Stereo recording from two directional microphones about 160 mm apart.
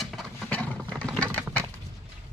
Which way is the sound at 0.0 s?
Centre (ahead or behind).